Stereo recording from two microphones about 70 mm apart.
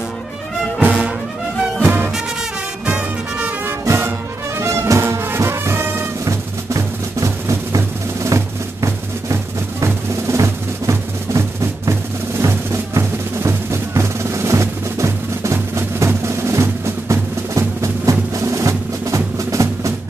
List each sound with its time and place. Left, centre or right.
0.7 s music: centre
1.8 s music: right
3.0 s music: centre
3.8 s music: right
6.2 s music: right
9.8 s drum: right
18.3 s music: right